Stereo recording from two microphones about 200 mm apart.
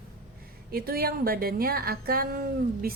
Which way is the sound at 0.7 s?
50° right (ahead or behind).